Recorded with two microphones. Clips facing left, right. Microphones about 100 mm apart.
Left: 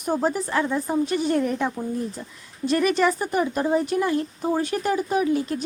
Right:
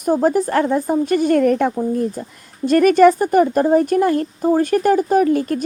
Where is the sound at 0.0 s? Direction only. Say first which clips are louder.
Right 8 dB; 45° right (ahead or behind).